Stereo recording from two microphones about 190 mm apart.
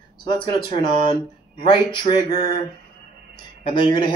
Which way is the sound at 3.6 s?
30° left (ahead or behind).